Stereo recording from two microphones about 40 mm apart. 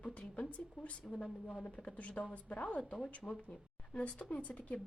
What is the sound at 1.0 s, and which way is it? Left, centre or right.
Speech, centre.